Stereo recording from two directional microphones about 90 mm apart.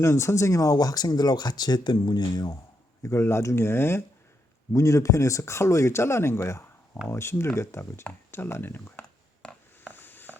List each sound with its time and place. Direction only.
0.0 s speech: 30° left (ahead or behind); by 2.6 s 50° left (ahead or behind)
3.0 s speech: 30° left (ahead or behind)
9.9 s a sound: 20° left (ahead or behind)